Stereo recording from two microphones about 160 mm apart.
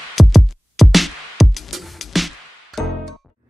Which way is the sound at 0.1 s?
Centre (ahead or behind).